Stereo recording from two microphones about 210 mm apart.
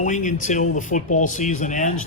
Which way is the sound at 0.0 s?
35° left (ahead or behind).